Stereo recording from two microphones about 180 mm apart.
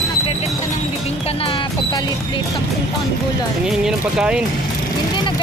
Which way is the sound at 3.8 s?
5° right (ahead or behind).